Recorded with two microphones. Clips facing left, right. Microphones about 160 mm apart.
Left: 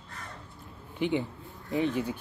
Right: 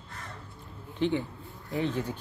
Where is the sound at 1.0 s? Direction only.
10° left (ahead or behind).